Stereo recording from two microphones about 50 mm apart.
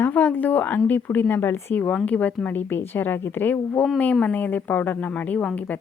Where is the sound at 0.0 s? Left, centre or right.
Left.